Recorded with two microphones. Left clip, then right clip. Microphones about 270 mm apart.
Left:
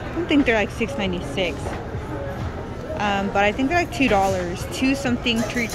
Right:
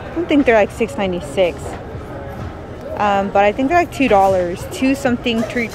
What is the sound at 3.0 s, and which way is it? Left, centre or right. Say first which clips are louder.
Speech: right 7 dB; centre.